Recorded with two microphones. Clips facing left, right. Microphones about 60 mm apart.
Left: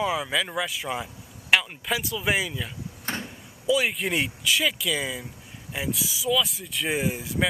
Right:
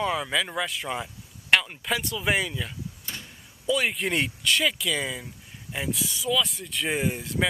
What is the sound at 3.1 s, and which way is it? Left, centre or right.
Vehicle, left.